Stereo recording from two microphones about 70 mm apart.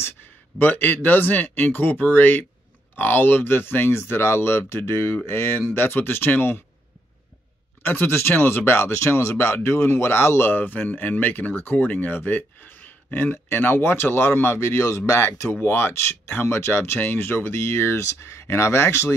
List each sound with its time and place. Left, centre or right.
0.6 s speech: left
7.8 s speech: left